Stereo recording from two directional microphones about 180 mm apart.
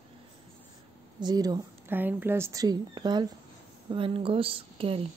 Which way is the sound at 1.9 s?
10° right (ahead or behind).